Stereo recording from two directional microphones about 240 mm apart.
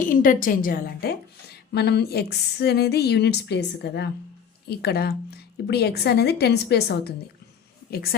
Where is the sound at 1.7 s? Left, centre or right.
Left.